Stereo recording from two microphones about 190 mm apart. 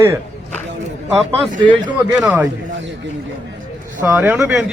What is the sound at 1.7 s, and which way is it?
Speech, 25° right (ahead or behind).